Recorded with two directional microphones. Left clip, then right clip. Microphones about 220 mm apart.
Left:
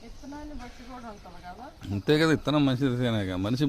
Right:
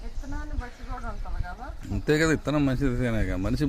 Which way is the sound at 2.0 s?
Centre (ahead or behind).